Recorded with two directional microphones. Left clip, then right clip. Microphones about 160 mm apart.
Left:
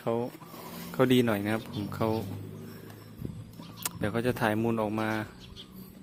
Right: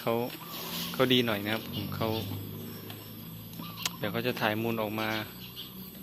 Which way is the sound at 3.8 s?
70° left (ahead or behind).